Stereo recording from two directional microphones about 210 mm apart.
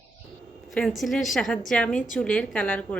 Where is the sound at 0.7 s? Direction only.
Centre (ahead or behind).